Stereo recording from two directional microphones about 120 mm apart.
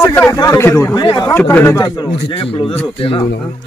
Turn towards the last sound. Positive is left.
turn(degrees=50)  # may be behind; listen again after turning